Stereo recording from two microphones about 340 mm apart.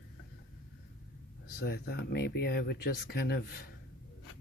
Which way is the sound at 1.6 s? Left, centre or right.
Left.